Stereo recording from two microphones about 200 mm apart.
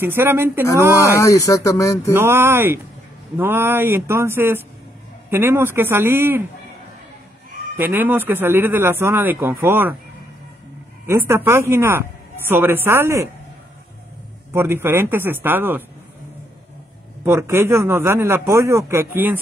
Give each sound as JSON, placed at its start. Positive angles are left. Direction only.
{"t": 0.0, "sound": "a man's voice", "side_deg": -10}
{"t": 1.1, "sound": "speech", "side_deg": 15}
{"t": 2.1, "sound": "a man's voice", "side_deg": -10}
{"t": 7.7, "sound": "a man's voice", "side_deg": -10}
{"t": 11.1, "sound": "a man's voice", "side_deg": -15}
{"t": 14.5, "sound": "a man's voice", "side_deg": -10}
{"t": 17.2, "sound": "a man's voice", "side_deg": -10}